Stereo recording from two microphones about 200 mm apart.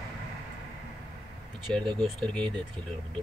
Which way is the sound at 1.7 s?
Centre (ahead or behind).